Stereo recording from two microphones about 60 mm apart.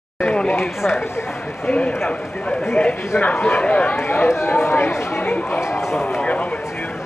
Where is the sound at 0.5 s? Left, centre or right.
Left.